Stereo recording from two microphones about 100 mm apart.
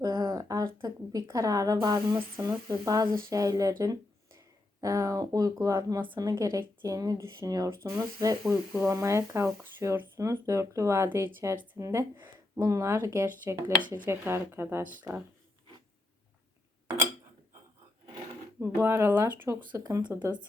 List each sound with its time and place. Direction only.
0.0 s a sound: 40° right (ahead or behind)
2.6 s speech: 35° right (ahead or behind)
12.1 s a sound: 20° right (ahead or behind)
12.6 s speech: 30° right (ahead or behind)
13.2 s speech: 20° right (ahead or behind)
18.6 s speech: 25° right (ahead or behind)